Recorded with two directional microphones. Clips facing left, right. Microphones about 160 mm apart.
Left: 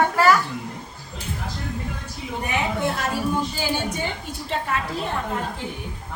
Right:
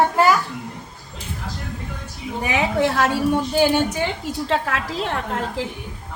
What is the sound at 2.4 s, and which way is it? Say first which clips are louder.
A woman's voice: right 5 dB; 90° right.